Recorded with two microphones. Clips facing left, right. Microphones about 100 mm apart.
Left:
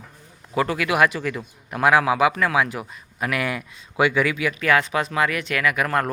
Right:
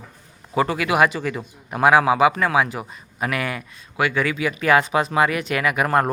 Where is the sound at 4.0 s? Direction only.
20° left (ahead or behind).